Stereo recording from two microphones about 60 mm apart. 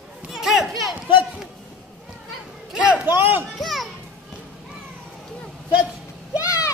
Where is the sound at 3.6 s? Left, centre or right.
Centre.